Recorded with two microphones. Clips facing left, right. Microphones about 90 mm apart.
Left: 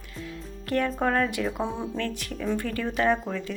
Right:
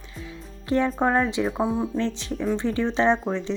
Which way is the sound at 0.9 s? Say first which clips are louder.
Right 3 dB; 20° right (ahead or behind).